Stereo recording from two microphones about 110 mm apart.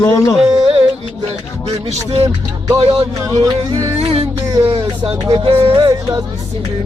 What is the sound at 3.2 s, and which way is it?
Speech, 40° right (ahead or behind).